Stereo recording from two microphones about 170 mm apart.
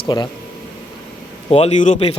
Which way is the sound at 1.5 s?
40° left (ahead or behind).